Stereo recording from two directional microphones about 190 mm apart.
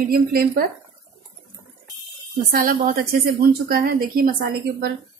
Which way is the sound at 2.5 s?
50° right (ahead or behind).